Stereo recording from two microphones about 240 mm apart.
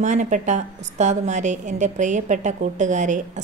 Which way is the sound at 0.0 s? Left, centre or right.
Right.